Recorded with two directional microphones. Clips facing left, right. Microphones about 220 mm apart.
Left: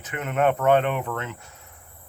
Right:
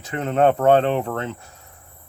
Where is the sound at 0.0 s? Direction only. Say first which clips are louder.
Right 5 dB; 35° right (ahead or behind).